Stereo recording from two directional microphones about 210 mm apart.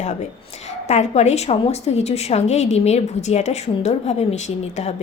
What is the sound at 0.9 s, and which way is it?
A woman's voice, 30° left (ahead or behind).